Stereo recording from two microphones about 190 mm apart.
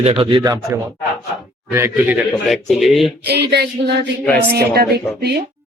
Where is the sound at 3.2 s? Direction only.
60° right (ahead or behind).